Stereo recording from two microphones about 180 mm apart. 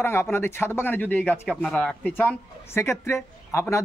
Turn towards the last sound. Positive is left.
turn(degrees=15)  # may be behind; listen again after turning